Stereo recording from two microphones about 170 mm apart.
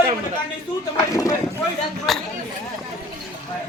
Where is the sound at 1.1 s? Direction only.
20° left (ahead or behind).